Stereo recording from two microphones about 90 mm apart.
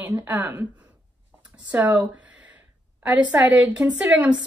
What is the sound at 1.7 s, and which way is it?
A woman's voice, 15° right (ahead or behind).